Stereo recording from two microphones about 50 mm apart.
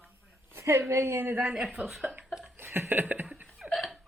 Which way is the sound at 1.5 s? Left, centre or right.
Centre.